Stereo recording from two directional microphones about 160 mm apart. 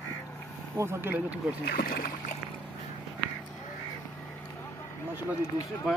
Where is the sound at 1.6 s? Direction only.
70° left (ahead or behind).